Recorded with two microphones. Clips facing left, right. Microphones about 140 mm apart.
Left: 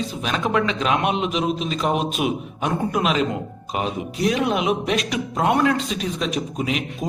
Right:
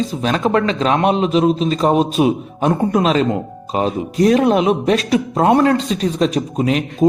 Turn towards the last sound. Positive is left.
turn(degrees=-40)  # may be behind; listen again after turning